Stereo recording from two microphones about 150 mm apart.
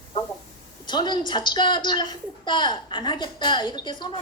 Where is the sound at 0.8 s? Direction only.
30° left (ahead or behind).